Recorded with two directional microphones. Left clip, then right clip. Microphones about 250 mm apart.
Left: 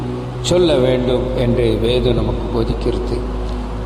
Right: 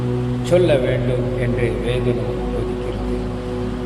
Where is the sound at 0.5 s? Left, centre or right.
Left.